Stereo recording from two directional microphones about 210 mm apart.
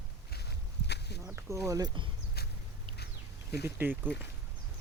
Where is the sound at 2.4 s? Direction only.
50° left (ahead or behind).